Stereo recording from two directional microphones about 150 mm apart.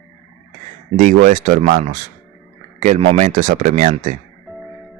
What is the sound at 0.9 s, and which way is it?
Speech, 60° right (ahead or behind).